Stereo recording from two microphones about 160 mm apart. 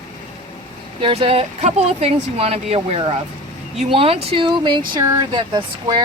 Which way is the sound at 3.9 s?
35° right (ahead or behind).